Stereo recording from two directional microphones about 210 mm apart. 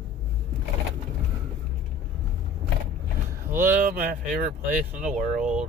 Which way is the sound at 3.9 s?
40° right (ahead or behind).